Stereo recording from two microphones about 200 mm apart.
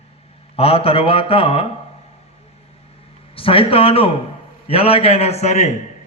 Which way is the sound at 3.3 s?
25° left (ahead or behind).